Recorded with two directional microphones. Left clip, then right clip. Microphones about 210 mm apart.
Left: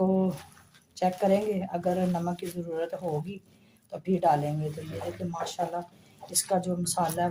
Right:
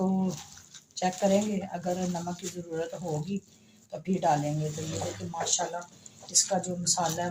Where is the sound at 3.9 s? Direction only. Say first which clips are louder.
Left 2 dB; 40° left (ahead or behind).